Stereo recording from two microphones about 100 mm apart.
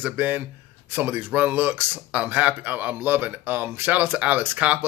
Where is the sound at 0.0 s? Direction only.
20° right (ahead or behind).